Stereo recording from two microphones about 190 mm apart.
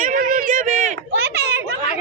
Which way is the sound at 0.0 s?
45° right (ahead or behind).